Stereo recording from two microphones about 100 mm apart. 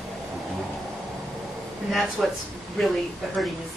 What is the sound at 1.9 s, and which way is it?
Speech, centre (ahead or behind).